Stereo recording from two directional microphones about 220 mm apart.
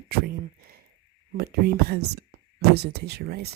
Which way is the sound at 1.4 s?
45° right (ahead or behind).